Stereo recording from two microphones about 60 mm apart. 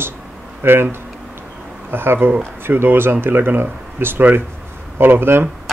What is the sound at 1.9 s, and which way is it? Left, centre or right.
Speech, right.